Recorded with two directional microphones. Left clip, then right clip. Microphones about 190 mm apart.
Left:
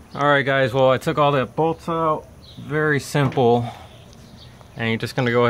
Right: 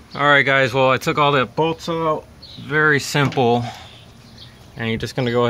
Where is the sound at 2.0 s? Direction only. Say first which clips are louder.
Even; 25° right (ahead or behind).